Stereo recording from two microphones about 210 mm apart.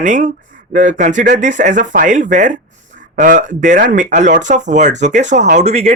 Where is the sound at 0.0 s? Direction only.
40° right (ahead or behind).